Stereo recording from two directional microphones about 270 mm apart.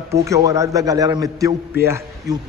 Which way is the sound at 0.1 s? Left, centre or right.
Centre.